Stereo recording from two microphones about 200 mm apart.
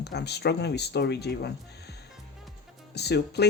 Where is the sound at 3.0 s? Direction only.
55° left (ahead or behind).